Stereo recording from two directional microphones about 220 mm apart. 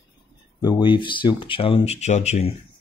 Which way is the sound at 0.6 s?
20° left (ahead or behind).